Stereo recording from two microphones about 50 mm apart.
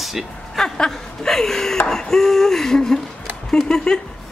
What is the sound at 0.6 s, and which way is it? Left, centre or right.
Chuckle, centre.